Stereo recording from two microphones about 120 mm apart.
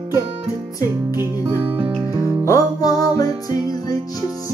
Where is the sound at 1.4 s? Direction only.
45° right (ahead or behind).